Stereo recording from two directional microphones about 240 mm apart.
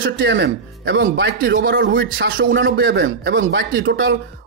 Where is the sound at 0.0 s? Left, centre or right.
Right.